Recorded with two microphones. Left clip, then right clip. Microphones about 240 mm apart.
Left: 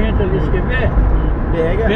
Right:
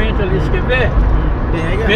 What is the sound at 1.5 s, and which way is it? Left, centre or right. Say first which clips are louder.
Vehicle: left 4 dB; centre.